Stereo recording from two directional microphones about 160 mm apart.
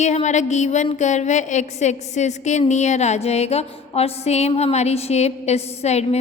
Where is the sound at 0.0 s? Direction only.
45° left (ahead or behind).